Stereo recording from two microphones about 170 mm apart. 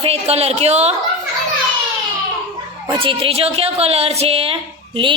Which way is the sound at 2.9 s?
30° right (ahead or behind).